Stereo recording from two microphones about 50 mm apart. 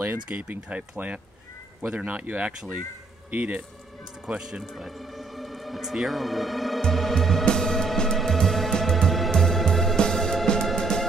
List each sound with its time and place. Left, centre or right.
0.3 s speech: right
4.3 s speech: centre
4.7 s speech: centre
6.8 s music: centre